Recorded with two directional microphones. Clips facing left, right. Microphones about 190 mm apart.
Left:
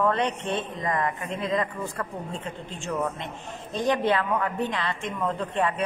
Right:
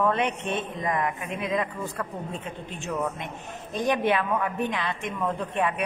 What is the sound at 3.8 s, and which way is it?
A woman's voice, 20° right (ahead or behind).